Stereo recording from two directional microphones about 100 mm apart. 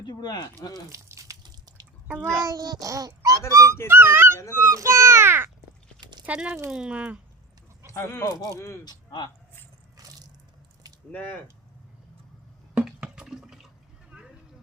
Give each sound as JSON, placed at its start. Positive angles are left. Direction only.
{"t": 0.0, "sound": "speech", "side_deg": 45}
{"t": 0.7, "sound": "speech", "side_deg": -30}
{"t": 2.4, "sound": "a child's voice", "side_deg": -35}
{"t": 6.2, "sound": "speech", "side_deg": -10}
{"t": 7.9, "sound": "speech", "side_deg": 25}
{"t": 8.8, "sound": "speech", "side_deg": 45}
{"t": 10.0, "sound": "a sound", "side_deg": -40}
{"t": 11.1, "sound": "speech", "side_deg": 15}
{"t": 12.7, "sound": "drip", "side_deg": -10}
{"t": 14.1, "sound": "vehicle", "side_deg": -10}